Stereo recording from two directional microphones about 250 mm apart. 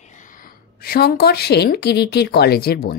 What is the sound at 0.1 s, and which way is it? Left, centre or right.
A woman's voice, left.